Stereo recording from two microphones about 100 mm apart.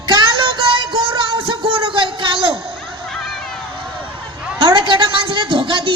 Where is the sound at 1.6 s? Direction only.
65° right (ahead or behind).